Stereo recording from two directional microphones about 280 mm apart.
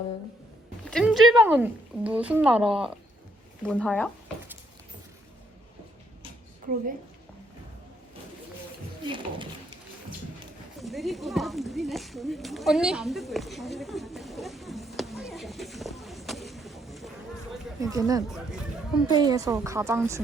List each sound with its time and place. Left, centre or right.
0.9 s speech: centre
9.0 s a woman's voice: centre
10.8 s a sound: centre
17.7 s a woman's voice: centre